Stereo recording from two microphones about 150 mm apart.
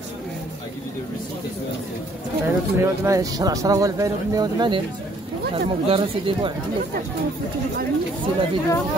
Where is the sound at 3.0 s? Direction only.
20° right (ahead or behind); by 6.5 s 40° right (ahead or behind).